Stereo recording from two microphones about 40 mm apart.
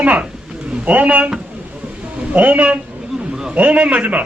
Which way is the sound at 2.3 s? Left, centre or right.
Right.